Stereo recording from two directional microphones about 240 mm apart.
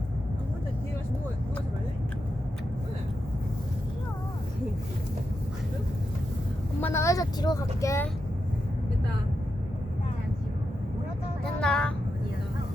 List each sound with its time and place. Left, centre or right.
6.8 s speech: centre
11.6 s vehicle: centre